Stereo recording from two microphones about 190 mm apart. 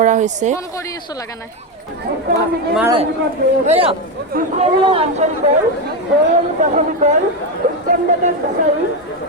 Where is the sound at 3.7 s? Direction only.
30° right (ahead or behind).